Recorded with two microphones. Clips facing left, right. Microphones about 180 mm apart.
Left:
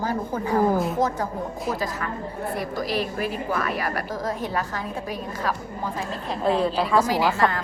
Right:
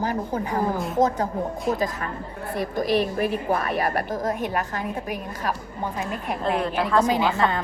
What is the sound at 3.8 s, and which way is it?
A woman's voice, 25° right (ahead or behind).